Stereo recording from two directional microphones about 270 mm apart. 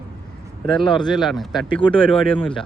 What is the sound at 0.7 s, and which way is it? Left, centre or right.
Speech, centre.